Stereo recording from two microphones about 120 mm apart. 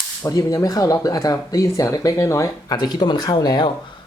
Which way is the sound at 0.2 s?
30° left (ahead or behind).